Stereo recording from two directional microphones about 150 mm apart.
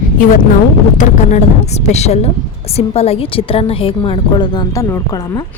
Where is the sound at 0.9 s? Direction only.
55° left (ahead or behind).